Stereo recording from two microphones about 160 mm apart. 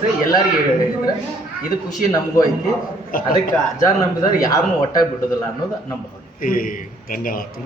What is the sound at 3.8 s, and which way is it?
Speech, 20° left (ahead or behind).